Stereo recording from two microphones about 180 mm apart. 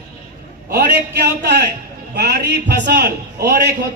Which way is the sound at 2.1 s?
65° right (ahead or behind).